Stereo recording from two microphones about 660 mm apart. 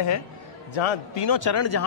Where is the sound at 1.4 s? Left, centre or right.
Left.